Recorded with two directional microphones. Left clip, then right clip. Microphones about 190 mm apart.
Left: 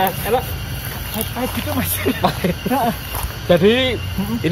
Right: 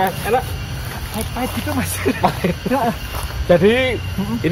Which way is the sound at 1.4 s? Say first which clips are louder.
Even; 5° left (ahead or behind).